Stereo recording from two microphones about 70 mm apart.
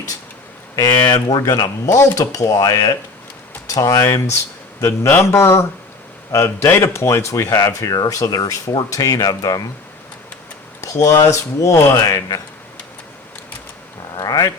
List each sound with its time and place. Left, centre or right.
0.8 s speech: left
1.4 s speech: left
3.8 s speech: left
4.0 s speech: left
10.8 s speech: left
14.2 s a sound: left